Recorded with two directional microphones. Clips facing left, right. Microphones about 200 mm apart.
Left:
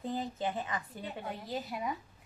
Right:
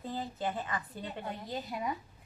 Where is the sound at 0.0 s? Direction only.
20° left (ahead or behind).